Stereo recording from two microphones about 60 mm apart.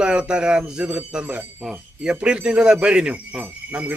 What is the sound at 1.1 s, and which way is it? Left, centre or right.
A man's voice, right.